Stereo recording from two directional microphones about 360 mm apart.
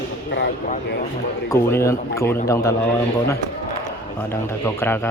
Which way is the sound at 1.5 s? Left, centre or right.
Centre.